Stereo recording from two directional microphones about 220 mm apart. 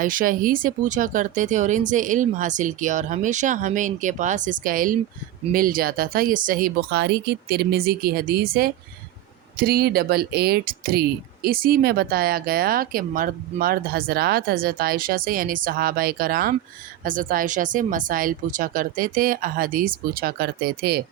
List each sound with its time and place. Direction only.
0.0 s speech: 40° right (ahead or behind)